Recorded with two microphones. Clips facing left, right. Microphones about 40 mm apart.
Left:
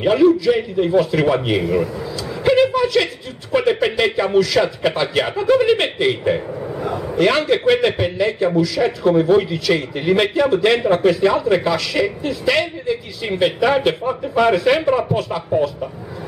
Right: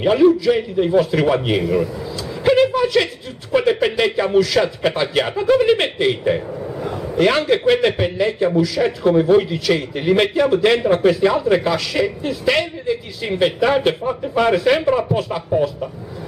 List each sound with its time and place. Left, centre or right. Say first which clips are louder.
0.0 s speech: even; centre
1.6 s speech: even; centre
2.4 s a sound: even; centre
3.5 s speech: even; centre
6.6 s a sound: left 2 dB; centre
7.2 s speech: even; centre
15.1 s speech: even; centre